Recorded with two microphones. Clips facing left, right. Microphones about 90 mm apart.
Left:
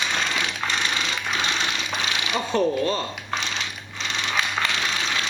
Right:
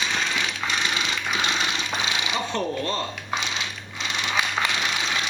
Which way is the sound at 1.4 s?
15° right (ahead or behind).